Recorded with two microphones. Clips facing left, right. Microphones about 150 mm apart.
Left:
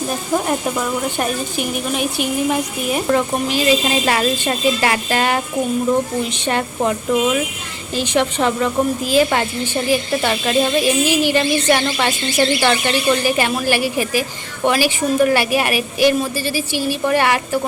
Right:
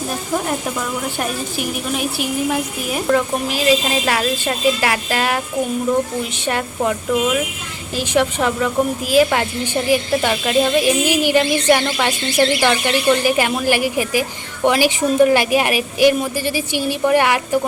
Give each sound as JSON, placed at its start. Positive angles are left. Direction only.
{"t": 1.2, "sound": "speech", "side_deg": -5}
{"t": 6.4, "sound": "speech", "side_deg": -5}